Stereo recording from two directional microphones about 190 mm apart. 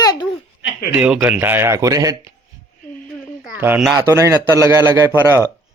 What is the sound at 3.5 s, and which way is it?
Speech, 10° right (ahead or behind).